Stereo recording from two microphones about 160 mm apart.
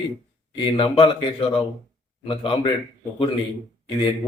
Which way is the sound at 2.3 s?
30° left (ahead or behind).